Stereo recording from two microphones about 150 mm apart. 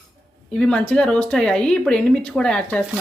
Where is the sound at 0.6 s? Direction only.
10° left (ahead or behind).